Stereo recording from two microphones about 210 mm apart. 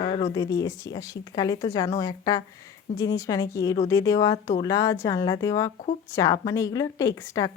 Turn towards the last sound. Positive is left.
turn(degrees=15)  # may be behind; listen again after turning